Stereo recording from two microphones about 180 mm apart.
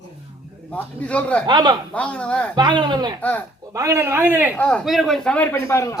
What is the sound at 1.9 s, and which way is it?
Speech, 5° left (ahead or behind).